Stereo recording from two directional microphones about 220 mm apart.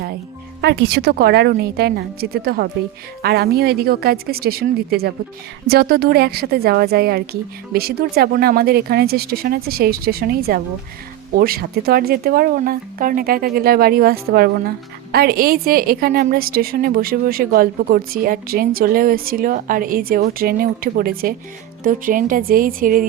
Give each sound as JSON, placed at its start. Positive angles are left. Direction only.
{"t": 0.6, "sound": "a woman's voice", "side_deg": -50}